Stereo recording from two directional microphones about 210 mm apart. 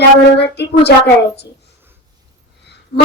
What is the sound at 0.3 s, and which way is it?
Speech, 55° left (ahead or behind).